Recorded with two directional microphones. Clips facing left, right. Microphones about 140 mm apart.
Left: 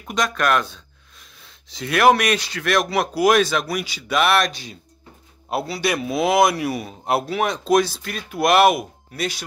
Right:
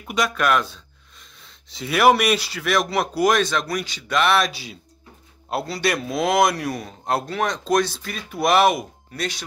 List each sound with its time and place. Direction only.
0.0 s speech: 5° right (ahead or behind)